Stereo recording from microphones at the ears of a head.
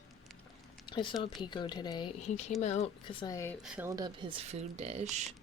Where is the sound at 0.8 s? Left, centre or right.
Left.